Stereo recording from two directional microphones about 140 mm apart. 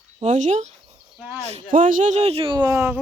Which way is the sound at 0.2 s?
60° right (ahead or behind).